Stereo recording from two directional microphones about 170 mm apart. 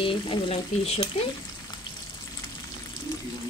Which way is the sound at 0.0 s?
30° left (ahead or behind).